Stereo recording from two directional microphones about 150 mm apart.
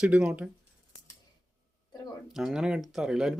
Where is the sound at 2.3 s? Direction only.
5° right (ahead or behind).